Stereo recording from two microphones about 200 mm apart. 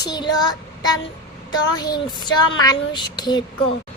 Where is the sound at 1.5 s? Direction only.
20° left (ahead or behind).